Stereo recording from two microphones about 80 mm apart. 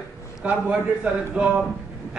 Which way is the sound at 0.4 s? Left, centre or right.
Centre.